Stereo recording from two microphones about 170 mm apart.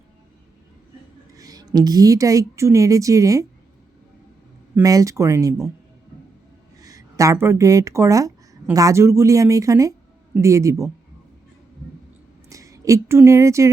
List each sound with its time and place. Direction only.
1.4 s a woman's voice: 20° right (ahead or behind)
4.7 s a woman's voice: 20° right (ahead or behind)
6.8 s speech: 20° right (ahead or behind)
12.5 s speech: 20° right (ahead or behind)